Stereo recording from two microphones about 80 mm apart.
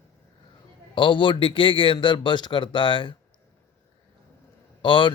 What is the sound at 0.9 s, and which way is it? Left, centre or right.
Speech, left.